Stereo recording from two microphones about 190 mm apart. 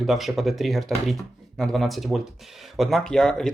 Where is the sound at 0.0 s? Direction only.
Centre (ahead or behind).